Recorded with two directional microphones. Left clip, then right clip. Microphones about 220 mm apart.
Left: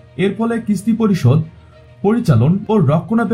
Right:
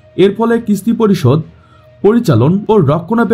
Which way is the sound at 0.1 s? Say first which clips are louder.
Right 8 dB; 50° right (ahead or behind).